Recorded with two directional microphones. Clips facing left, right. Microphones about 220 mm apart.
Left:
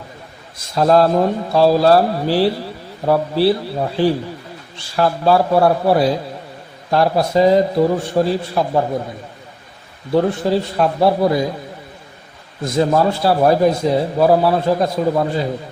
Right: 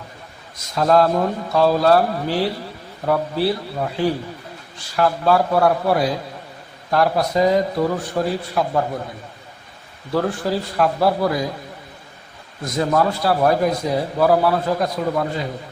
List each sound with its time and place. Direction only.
0.8 s a man's voice: 30° left (ahead or behind)
10.1 s a man's voice: 25° left (ahead or behind)
12.6 s a man's voice: 25° left (ahead or behind)